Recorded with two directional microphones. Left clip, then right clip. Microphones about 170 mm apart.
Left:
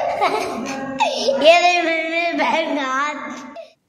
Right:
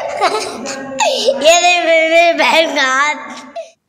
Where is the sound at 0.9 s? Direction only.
15° right (ahead or behind).